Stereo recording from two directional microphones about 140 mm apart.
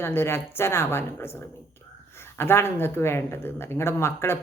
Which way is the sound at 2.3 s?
15° left (ahead or behind).